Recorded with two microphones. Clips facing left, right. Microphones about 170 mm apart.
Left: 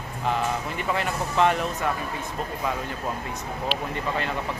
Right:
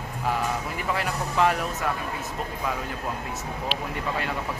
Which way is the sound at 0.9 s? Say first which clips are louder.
Left 1 dB; 5° right (ahead or behind).